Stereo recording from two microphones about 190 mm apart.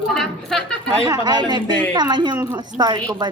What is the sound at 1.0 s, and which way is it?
A woman's voice, 20° right (ahead or behind).